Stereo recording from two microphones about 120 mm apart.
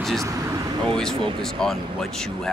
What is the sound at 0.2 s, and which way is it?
Speech, 25° right (ahead or behind).